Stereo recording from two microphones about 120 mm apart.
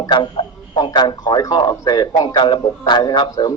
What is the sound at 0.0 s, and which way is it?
Speech, 40° left (ahead or behind).